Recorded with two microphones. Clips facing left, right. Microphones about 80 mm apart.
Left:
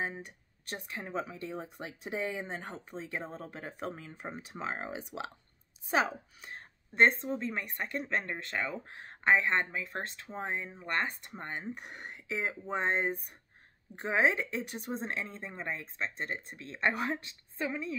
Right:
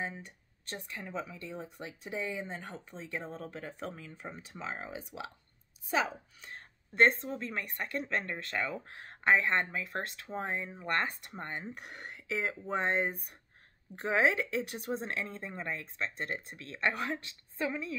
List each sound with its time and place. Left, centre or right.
0.0 s speech: centre
4.1 s speech: centre
4.6 s speech: left
6.0 s a woman's voice: centre